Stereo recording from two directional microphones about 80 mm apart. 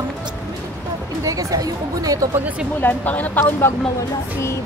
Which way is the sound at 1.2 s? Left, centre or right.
Right.